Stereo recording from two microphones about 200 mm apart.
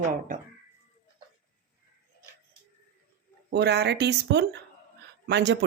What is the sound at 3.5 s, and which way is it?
Speech, 55° right (ahead or behind).